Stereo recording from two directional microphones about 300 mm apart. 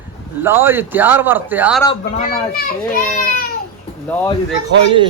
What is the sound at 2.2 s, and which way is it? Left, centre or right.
Speech, left.